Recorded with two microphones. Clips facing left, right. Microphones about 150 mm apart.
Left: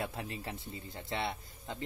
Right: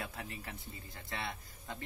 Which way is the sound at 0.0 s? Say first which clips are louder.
Left 5 dB; 25° left (ahead or behind).